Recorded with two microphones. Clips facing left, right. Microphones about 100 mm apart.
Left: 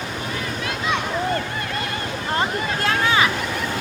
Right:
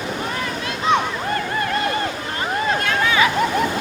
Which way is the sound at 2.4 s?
35° left (ahead or behind).